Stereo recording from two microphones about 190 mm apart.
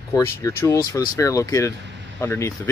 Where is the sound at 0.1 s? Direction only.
15° left (ahead or behind).